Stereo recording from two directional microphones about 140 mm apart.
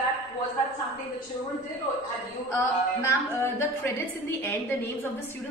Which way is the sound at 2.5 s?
20° left (ahead or behind).